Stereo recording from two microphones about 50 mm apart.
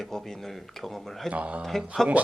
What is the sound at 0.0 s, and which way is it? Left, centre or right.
Speech, centre.